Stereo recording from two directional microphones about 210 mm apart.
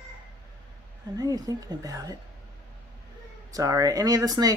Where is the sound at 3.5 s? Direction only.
15° right (ahead or behind).